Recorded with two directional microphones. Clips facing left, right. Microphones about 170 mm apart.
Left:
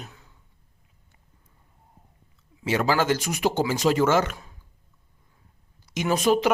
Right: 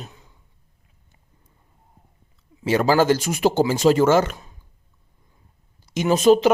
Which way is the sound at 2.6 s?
35° right (ahead or behind).